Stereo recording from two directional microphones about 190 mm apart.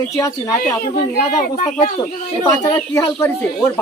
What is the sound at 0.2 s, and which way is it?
Speech, 20° left (ahead or behind).